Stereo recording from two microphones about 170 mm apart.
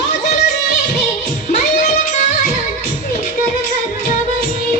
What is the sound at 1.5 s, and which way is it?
Music, 45° left (ahead or behind).